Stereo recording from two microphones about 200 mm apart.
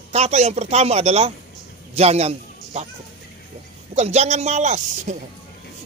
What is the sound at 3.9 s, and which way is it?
Speech, 35° right (ahead or behind).